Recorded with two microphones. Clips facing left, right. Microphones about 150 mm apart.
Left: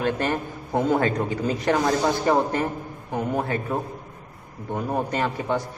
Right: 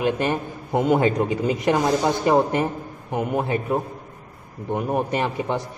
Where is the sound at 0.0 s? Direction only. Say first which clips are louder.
Right 2 dB; 15° right (ahead or behind).